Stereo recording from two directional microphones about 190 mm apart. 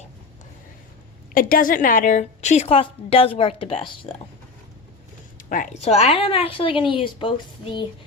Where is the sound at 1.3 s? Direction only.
50° left (ahead or behind); by 4.1 s 30° left (ahead or behind).